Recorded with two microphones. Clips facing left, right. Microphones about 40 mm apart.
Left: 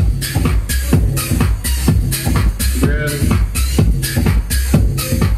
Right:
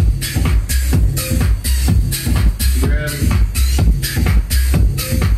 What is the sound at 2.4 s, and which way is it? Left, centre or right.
Music, centre.